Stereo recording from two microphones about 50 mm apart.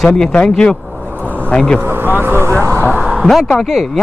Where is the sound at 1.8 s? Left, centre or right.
Right.